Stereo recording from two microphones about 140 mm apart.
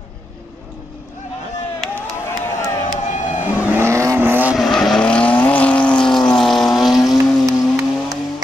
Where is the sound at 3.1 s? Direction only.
60° left (ahead or behind).